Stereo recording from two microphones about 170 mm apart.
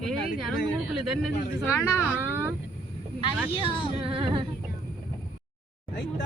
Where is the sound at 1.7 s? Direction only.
15° left (ahead or behind).